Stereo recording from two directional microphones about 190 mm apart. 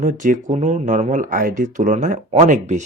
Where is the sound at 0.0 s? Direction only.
45° right (ahead or behind).